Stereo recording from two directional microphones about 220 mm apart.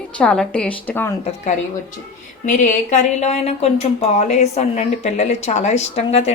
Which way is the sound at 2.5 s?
35° left (ahead or behind).